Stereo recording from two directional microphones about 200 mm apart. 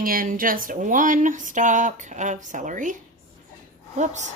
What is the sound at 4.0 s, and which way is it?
Speech, 35° right (ahead or behind).